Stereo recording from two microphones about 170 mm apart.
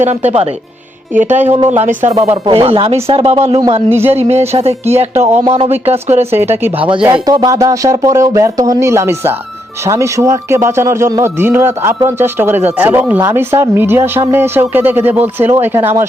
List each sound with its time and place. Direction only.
0.0 s speech: 40° right (ahead or behind)
2.4 s speech: 35° right (ahead or behind)
6.3 s speech: 15° right (ahead or behind)
6.7 s speech: 30° right (ahead or behind); by 16.0 s 15° right (ahead or behind)